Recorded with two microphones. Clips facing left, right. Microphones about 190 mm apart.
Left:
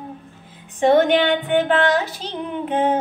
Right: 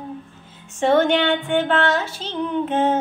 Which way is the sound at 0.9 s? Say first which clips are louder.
Left 1 dB; 15° left (ahead or behind).